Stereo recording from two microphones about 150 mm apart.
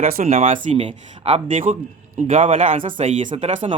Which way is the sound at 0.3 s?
50° right (ahead or behind).